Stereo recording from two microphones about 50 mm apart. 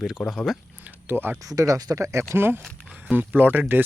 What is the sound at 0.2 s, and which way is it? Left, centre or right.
Speech, centre.